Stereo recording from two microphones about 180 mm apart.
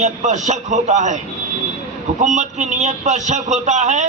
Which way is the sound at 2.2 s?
40° right (ahead or behind).